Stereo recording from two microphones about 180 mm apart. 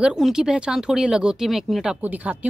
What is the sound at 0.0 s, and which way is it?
Speech, 5° right (ahead or behind).